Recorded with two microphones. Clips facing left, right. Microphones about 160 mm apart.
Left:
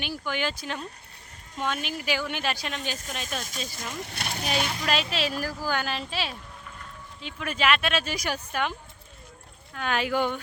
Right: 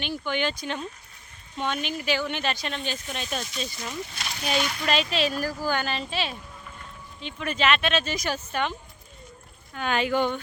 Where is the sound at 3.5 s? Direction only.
45° left (ahead or behind).